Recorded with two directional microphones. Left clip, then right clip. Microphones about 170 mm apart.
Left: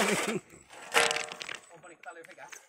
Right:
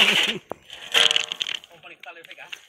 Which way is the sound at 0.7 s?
35° right (ahead or behind).